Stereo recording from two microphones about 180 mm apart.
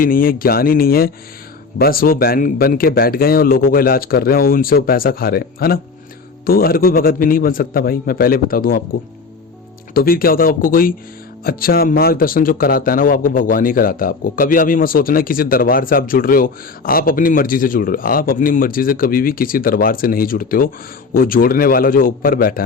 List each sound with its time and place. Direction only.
0.0 s a man's voice: 55° left (ahead or behind)
9.9 s a man's voice: 55° left (ahead or behind)